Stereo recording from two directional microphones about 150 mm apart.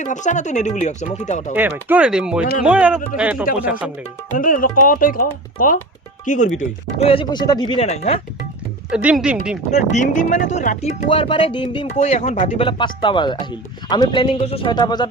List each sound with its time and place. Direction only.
0.0 s speech: 55° left (ahead or behind)
1.5 s speech: 10° right (ahead or behind)
3.4 s speech: 65° left (ahead or behind)
3.7 s speech: 10° right (ahead or behind)
4.4 s speech: 65° left (ahead or behind)
6.2 s speech: 55° left (ahead or behind)
6.6 s speech: 40° left (ahead or behind)
7.3 s speech: 25° left (ahead or behind)
7.9 s speech: 45° left (ahead or behind)
8.9 s speech: 5° right (ahead or behind)
9.7 s speech: 50° left (ahead or behind)
11.1 s speech: 35° left (ahead or behind)